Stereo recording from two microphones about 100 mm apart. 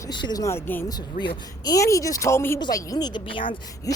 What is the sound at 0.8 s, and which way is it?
Speech, 45° left (ahead or behind).